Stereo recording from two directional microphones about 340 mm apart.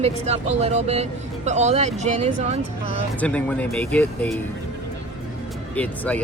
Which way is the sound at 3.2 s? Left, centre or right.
Centre.